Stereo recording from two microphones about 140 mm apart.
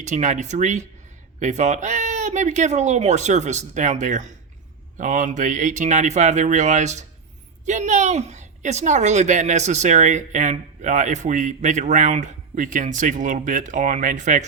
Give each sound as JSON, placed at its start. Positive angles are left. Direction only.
{"t": 0.0, "sound": "a woman's voice", "side_deg": -60}